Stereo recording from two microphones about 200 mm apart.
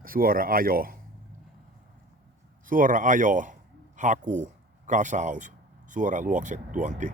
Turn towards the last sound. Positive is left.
turn(degrees=-40)  # may be behind; listen again after turning